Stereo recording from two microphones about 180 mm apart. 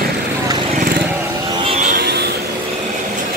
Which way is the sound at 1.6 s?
35° right (ahead or behind).